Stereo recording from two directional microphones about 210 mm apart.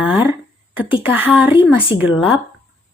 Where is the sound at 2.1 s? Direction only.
25° left (ahead or behind).